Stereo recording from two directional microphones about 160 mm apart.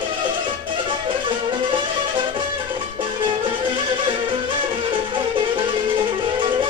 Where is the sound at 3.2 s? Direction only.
30° right (ahead or behind).